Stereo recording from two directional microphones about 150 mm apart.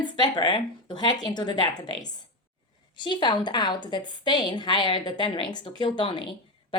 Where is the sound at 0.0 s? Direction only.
30° left (ahead or behind).